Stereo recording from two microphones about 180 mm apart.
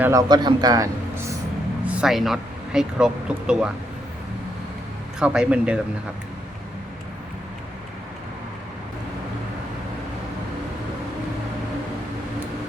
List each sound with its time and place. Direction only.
0.0 s a man's voice: 20° right (ahead or behind)
1.9 s speech: 5° right (ahead or behind)
5.2 s speech: 5° right (ahead or behind)